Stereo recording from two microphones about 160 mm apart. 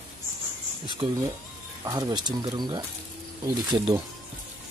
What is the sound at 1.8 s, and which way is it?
Speech, 25° right (ahead or behind).